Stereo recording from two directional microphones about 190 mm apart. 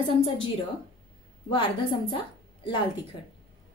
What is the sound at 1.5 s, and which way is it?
A woman's voice, 25° left (ahead or behind).